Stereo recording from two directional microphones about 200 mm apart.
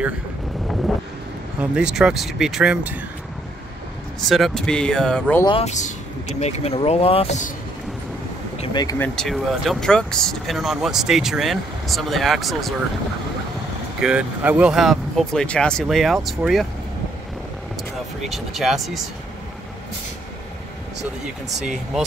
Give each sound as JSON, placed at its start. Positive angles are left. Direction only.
{"t": 1.6, "sound": "speech", "side_deg": -5}
{"t": 4.3, "sound": "speech", "side_deg": 0}
{"t": 5.4, "sound": "speech", "side_deg": 30}
{"t": 8.5, "sound": "speech", "side_deg": 20}
{"t": 13.9, "sound": "speech", "side_deg": -5}
{"t": 18.2, "sound": "speech", "side_deg": 0}
{"t": 21.0, "sound": "speech", "side_deg": 0}